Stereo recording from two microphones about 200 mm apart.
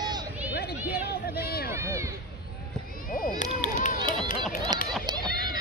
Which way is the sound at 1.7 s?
15° right (ahead or behind).